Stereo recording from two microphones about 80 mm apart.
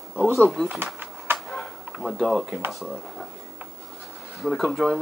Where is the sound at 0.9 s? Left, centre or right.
Right.